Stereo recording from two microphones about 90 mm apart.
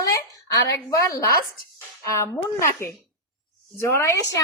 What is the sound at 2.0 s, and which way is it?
A woman's voice, 35° left (ahead or behind).